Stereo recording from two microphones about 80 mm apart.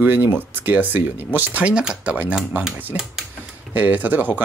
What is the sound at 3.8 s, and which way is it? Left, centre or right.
Speech, right.